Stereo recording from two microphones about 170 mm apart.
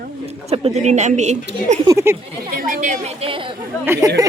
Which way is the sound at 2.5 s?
50° right (ahead or behind).